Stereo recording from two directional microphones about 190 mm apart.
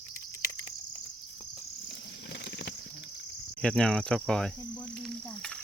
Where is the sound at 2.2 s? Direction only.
65° left (ahead or behind).